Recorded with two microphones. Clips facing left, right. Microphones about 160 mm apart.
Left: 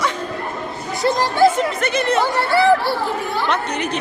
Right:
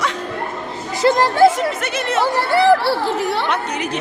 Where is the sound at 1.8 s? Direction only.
5° right (ahead or behind).